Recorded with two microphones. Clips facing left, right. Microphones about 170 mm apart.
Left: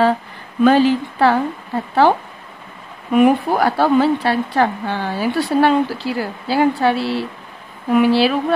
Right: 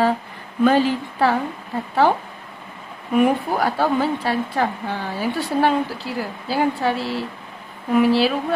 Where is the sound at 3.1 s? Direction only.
75° left (ahead or behind).